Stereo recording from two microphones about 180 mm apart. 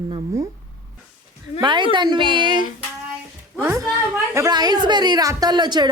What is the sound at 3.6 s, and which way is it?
A woman's voice, 15° right (ahead or behind).